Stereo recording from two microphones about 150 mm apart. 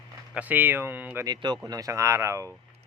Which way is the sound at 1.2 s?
30° right (ahead or behind).